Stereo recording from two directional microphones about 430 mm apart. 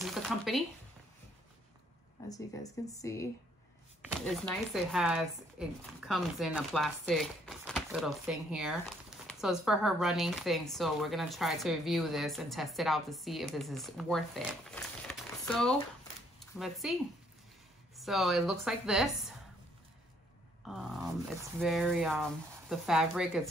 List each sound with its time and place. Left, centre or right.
0.0 s a sound: centre
2.2 s speech: centre
17.9 s speech: centre
20.6 s speech: centre